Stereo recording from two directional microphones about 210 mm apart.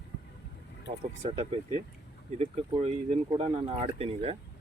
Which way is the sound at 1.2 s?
30° right (ahead or behind).